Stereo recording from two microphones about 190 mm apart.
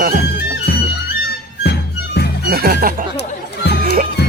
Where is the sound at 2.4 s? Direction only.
55° right (ahead or behind).